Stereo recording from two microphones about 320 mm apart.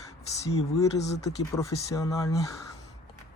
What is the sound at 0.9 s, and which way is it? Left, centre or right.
Speech, left.